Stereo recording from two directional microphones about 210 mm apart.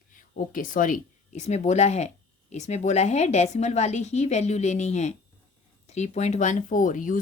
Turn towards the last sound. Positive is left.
turn(degrees=40)  # may be behind; listen again after turning